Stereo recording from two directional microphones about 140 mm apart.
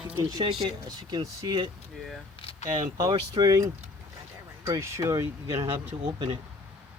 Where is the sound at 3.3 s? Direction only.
25° right (ahead or behind).